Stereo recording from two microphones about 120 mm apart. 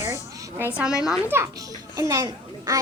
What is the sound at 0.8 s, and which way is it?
Speech, 5° right (ahead or behind).